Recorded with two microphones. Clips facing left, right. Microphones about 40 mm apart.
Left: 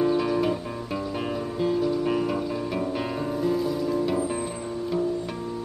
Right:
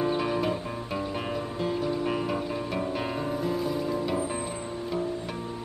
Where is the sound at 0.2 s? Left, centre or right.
Centre.